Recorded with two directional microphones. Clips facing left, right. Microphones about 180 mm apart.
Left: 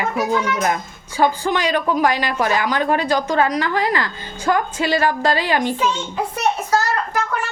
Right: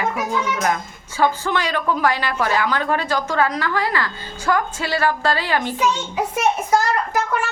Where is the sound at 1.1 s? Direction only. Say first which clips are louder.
Left 2 dB; 15° left (ahead or behind).